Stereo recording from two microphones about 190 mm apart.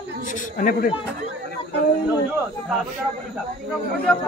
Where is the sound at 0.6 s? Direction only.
50° left (ahead or behind).